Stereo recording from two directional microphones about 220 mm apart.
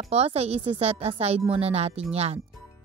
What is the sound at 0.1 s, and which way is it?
Speech, 30° right (ahead or behind).